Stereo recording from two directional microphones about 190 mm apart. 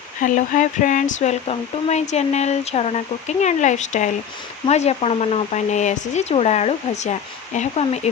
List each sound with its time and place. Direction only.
0.2 s speech: 40° left (ahead or behind)